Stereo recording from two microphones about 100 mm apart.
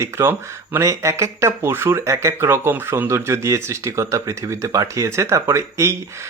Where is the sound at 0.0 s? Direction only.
25° right (ahead or behind).